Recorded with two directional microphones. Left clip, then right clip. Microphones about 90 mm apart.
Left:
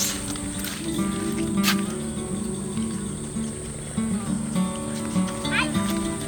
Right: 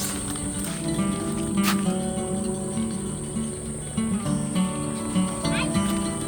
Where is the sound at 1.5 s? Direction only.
20° right (ahead or behind).